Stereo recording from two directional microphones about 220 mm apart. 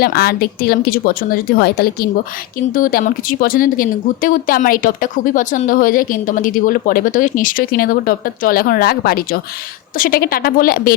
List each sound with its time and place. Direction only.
0.0 s speech: 45° left (ahead or behind)